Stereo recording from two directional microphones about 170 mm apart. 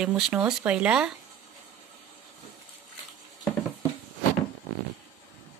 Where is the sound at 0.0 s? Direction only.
10° right (ahead or behind).